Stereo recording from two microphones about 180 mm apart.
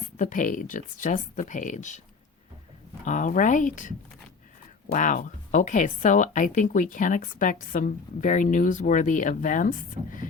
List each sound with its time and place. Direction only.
0.2 s a woman's voice: 45° left (ahead or behind)
3.0 s a woman's voice: 45° left (ahead or behind)